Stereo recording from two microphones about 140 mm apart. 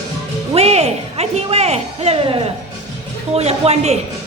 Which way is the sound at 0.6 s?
50° right (ahead or behind).